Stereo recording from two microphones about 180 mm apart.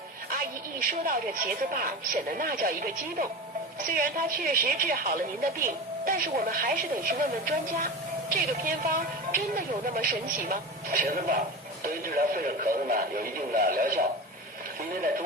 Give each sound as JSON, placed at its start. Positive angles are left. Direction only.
{"t": 0.3, "sound": "a woman's voice", "side_deg": -55}